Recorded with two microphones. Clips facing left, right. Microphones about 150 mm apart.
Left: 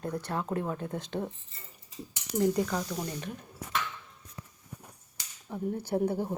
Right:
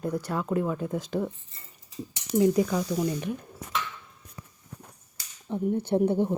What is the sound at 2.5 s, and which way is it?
Speech, 10° right (ahead or behind).